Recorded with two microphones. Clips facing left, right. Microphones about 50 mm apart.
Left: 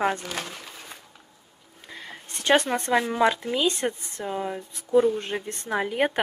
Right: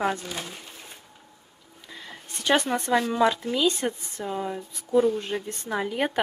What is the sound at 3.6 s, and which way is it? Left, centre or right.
Speech, left.